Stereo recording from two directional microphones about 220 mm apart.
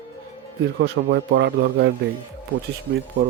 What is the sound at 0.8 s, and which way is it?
Speech, 45° right (ahead or behind).